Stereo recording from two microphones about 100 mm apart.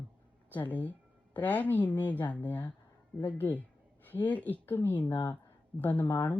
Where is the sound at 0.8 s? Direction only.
15° left (ahead or behind).